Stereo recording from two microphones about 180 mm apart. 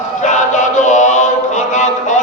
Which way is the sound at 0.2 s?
40° left (ahead or behind).